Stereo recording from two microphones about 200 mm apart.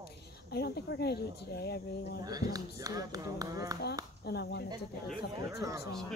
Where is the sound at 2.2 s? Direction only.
20° right (ahead or behind).